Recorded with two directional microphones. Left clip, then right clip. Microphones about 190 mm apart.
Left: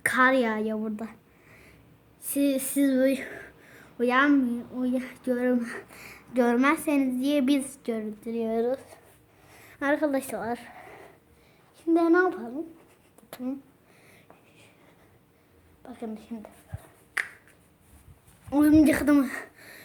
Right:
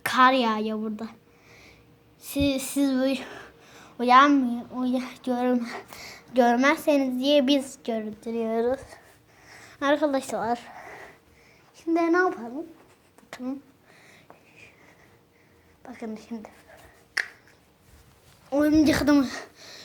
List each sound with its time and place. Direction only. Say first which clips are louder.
0.0 s a woman's voice: right 2 dB; 5° right (ahead or behind)
0.8 s a sound: right 1 dB; 10° left (ahead or behind)
2.2 s a woman's voice: even; centre (ahead or behind)
3.9 s a woman's voice: right 5 dB; 15° right (ahead or behind); by 9.0 s centre (ahead or behind)
9.5 s a sound: right 3 dB; centre (ahead or behind)
11.8 s a woman's voice: even; centre (ahead or behind)
15.8 s speech: right 1 dB; 5° right (ahead or behind)
17.2 s finger snapping: right 2 dB; centre (ahead or behind)
18.5 s a woman's voice: left 1 dB; 20° left (ahead or behind)
18.8 s speech: even; centre (ahead or behind)